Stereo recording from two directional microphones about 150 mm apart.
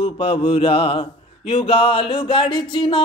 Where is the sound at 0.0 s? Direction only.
40° left (ahead or behind).